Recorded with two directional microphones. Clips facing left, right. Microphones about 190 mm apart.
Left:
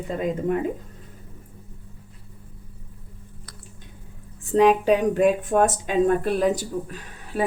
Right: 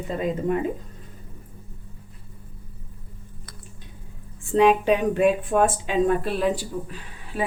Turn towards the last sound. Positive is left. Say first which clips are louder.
# left 3 dB
turn(degrees=45)  # may be behind; listen again after turning